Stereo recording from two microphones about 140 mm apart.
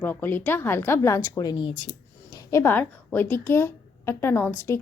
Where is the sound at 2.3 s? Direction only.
20° left (ahead or behind).